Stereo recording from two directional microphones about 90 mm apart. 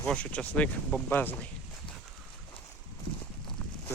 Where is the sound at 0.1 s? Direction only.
15° left (ahead or behind).